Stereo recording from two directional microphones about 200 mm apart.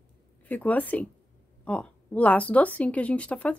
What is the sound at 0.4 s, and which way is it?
A woman's voice, 10° left (ahead or behind).